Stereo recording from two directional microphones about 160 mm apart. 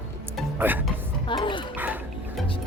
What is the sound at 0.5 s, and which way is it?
Speech, 10° right (ahead or behind).